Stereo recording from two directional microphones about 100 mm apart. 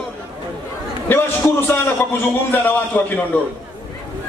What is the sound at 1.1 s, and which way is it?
A man's voice, 25° left (ahead or behind).